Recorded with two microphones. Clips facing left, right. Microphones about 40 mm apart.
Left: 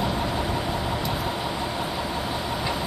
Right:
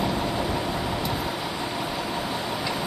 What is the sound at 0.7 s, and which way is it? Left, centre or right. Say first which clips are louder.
Vehicle: even; centre.